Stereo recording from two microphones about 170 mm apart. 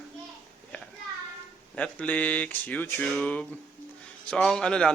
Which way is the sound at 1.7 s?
5° left (ahead or behind).